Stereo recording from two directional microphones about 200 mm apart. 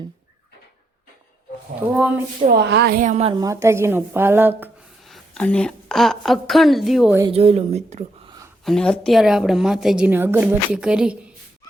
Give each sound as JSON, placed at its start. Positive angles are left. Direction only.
{"t": 2.4, "sound": "a woman's voice", "side_deg": -50}
{"t": 3.3, "sound": "a woman's voice", "side_deg": -15}
{"t": 5.0, "sound": "a woman's voice", "side_deg": 0}
{"t": 7.2, "sound": "a woman's voice", "side_deg": -30}
{"t": 8.6, "sound": "a woman's voice", "side_deg": 5}